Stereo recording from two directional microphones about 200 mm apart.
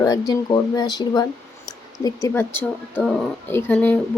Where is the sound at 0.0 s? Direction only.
20° left (ahead or behind).